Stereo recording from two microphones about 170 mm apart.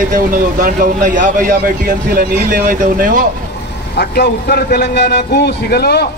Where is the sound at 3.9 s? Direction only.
80° left.